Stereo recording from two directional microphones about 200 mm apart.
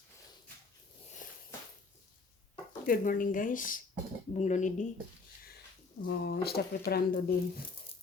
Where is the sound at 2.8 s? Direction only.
45° left (ahead or behind).